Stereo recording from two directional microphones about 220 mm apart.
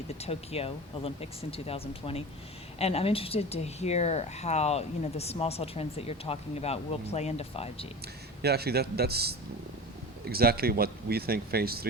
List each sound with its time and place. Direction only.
0.1 s speech: 30° left (ahead or behind)
8.4 s speech: 45° right (ahead or behind)